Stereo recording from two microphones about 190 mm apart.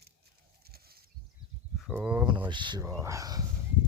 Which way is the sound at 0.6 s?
55° right (ahead or behind).